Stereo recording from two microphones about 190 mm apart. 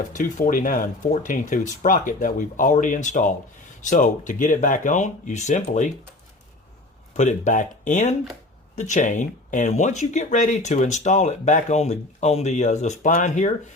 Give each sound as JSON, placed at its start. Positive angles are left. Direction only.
{"t": 0.1, "sound": "speech", "side_deg": 45}
{"t": 7.2, "sound": "speech", "side_deg": 40}